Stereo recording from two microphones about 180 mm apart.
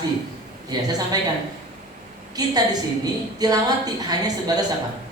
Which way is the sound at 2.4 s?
20° right (ahead or behind).